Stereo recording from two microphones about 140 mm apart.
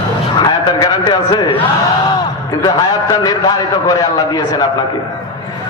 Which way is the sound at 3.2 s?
30° left (ahead or behind).